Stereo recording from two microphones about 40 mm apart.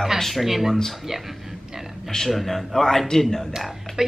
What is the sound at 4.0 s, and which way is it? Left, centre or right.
Speech, centre.